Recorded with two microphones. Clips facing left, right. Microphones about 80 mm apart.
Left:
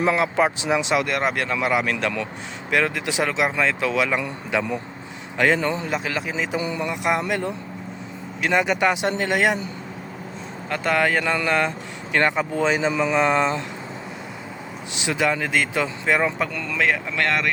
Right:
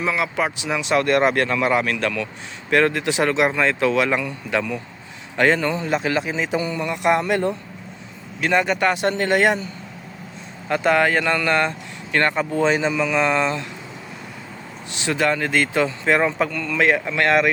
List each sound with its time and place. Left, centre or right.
0.2 s speech: left
0.9 s a man's voice: centre
2.6 s a man's voice: centre
5.9 s speech: centre
6.6 s a man's voice: centre
7.0 s a man's voice: centre
10.7 s a man's voice: centre
12.9 s speech: left
14.9 s speech: centre
16.5 s a man's voice: centre
16.7 s speech: centre